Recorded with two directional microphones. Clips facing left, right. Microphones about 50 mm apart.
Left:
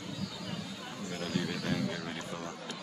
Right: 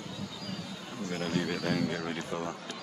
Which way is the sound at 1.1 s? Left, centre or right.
Right.